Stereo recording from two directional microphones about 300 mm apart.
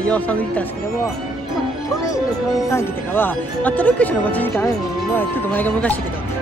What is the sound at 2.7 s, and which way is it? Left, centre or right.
Speech, centre.